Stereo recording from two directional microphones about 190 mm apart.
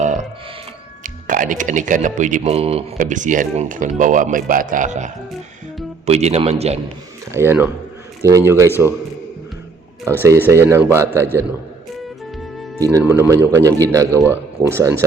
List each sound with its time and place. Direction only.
0.0 s a sound: 40° right (ahead or behind)
1.0 s speech: 45° right (ahead or behind)
7.3 s speech: 15° right (ahead or behind)
10.4 s speech: 15° right (ahead or behind)
12.8 s speech: 15° right (ahead or behind)